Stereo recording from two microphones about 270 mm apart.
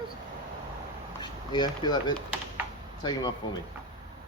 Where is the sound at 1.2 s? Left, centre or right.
Centre.